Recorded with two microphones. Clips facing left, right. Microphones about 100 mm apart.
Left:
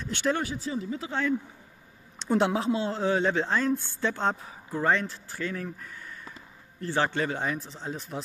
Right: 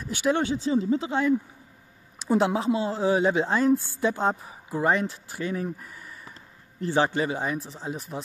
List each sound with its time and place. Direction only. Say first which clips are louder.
0.0 s speech: right 2 dB; 10° right (ahead or behind)
0.3 s speech: right 6 dB; 25° right (ahead or behind)
2.1 s speech: right 2 dB; 5° right (ahead or behind)
7.2 s speech: right 2 dB; 5° right (ahead or behind)